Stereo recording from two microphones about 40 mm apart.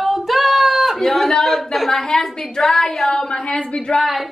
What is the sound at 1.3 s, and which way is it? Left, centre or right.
A woman's voice, centre.